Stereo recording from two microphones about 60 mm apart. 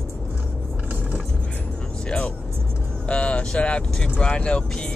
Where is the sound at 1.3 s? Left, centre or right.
Centre.